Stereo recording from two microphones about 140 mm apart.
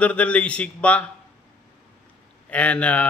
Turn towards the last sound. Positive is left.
turn(degrees=10)  # may be behind; listen again after turning